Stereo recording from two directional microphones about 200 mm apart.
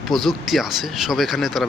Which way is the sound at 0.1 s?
Centre (ahead or behind).